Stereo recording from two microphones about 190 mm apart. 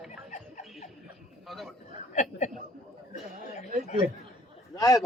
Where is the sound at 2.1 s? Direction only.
40° left (ahead or behind).